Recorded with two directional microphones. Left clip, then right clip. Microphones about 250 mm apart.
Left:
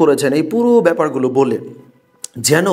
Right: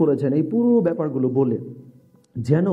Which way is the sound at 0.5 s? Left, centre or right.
Left.